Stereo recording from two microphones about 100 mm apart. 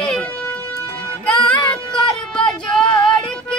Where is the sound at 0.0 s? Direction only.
10° left (ahead or behind).